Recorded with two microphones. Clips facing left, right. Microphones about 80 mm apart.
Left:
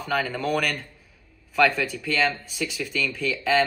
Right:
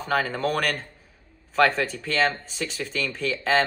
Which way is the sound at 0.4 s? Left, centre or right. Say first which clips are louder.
Even; right.